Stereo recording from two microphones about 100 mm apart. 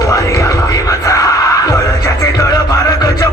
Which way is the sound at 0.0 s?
35° left (ahead or behind).